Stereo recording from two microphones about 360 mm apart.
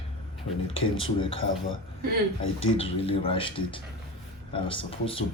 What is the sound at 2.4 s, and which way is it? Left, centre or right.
Speech, left.